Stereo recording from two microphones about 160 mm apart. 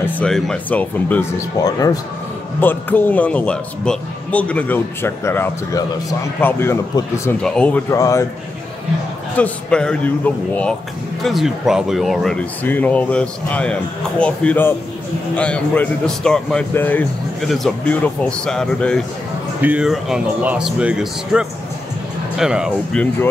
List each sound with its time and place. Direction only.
0.0 s speech: 5° left (ahead or behind)
1.6 s a man's voice: 20° left (ahead or behind)
7.9 s a man's voice: 20° left (ahead or behind)
9.4 s speech: 5° left (ahead or behind)
19.6 s speech: 5° right (ahead or behind)